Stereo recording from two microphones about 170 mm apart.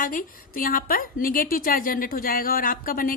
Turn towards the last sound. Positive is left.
turn(degrees=55)  # may be behind; listen again after turning